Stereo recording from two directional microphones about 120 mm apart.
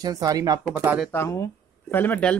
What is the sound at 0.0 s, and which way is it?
Speech, 30° right (ahead or behind).